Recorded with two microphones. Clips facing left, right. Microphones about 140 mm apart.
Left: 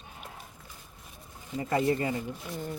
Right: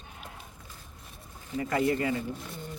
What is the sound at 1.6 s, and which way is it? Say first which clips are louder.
Speech: even; 25° left (ahead or behind).